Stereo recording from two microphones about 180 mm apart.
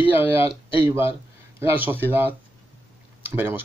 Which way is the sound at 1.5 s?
10° right (ahead or behind).